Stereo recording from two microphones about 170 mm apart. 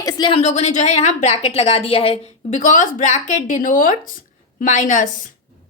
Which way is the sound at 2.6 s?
50° left (ahead or behind).